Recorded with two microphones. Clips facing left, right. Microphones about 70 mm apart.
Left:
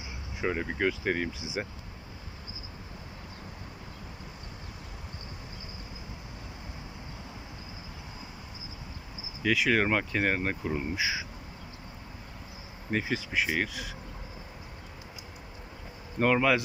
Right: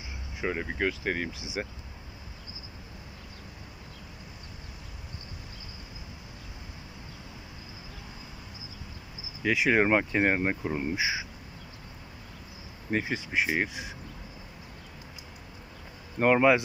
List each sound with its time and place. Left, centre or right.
0.4 s speech: centre
9.4 s speech: centre
12.9 s speech: centre
16.2 s speech: centre